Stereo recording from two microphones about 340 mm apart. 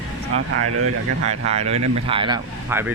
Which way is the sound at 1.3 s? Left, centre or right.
Centre.